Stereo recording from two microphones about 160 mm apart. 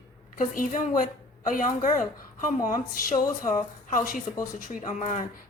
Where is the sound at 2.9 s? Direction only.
60° left (ahead or behind).